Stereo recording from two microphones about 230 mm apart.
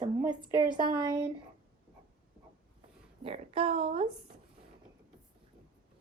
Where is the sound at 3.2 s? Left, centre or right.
Right.